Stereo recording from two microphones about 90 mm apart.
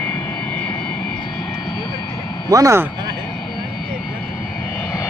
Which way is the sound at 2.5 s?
40° right (ahead or behind).